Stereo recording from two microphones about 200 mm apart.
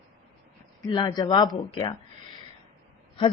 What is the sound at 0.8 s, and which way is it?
Speech, 20° left (ahead or behind).